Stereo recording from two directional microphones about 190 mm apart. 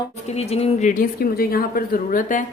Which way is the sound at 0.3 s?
35° left (ahead or behind).